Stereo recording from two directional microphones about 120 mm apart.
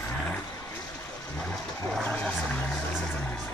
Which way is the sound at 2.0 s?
5° left (ahead or behind).